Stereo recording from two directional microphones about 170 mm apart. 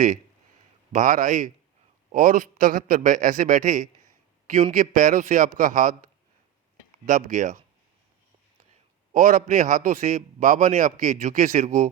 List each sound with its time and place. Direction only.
0.9 s a man's voice: 50° right (ahead or behind)
9.1 s a man's voice: 50° right (ahead or behind)